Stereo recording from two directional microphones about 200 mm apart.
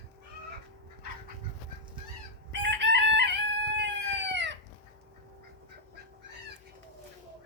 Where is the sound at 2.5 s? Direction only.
60° right (ahead or behind).